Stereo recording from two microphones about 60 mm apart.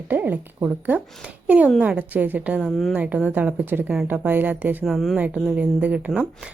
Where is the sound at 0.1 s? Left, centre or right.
Right.